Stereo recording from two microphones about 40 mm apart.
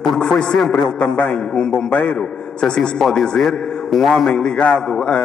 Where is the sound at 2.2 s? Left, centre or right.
Left.